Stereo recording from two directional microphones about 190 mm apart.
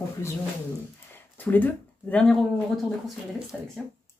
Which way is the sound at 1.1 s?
10° left (ahead or behind).